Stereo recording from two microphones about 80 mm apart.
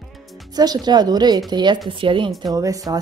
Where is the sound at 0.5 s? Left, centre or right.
Right.